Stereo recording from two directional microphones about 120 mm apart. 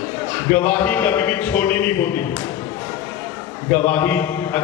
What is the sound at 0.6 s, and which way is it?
Speech, 15° left (ahead or behind).